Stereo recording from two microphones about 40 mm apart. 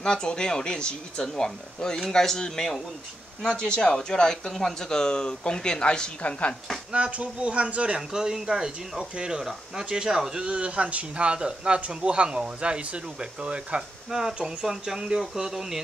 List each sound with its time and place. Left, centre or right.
0.0 s a woman's voice: centre
6.9 s speech: right
8.1 s speech: centre
10.3 s speech: right; by 15.8 s centre